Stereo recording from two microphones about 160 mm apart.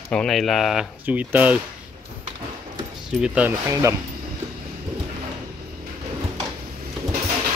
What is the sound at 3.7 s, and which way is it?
Speech, 20° right (ahead or behind).